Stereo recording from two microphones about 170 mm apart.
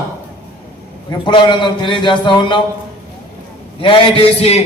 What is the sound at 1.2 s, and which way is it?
A man's voice, 30° left (ahead or behind).